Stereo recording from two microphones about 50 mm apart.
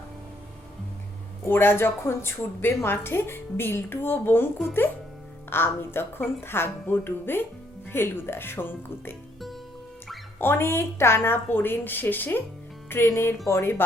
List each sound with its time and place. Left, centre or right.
1.5 s a woman's voice: left
5.5 s a woman's voice: left
10.3 s a woman's voice: left
13.4 s speech: left